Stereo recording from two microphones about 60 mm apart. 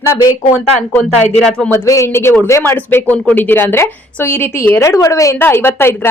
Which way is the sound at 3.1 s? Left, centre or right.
Left.